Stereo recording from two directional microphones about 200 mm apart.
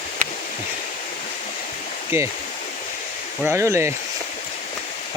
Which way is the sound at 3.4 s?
15° right (ahead or behind).